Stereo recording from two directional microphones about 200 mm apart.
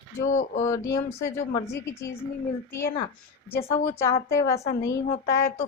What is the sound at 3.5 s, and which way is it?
A woman's voice, 15° left (ahead or behind).